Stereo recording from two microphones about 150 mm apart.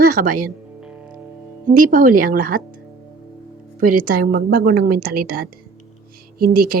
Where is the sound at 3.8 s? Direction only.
70° right (ahead or behind).